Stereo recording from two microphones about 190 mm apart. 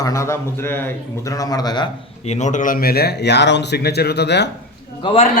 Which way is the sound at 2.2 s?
40° left (ahead or behind).